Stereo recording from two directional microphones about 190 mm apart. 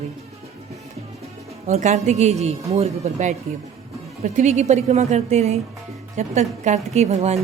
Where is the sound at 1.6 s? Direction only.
35° right (ahead or behind).